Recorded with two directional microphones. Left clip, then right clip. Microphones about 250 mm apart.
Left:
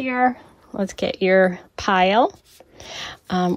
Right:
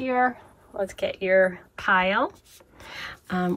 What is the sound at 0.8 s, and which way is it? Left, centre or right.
Speech, left.